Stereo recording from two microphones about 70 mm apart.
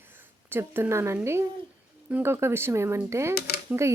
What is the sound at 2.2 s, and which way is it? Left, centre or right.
A woman's voice, right.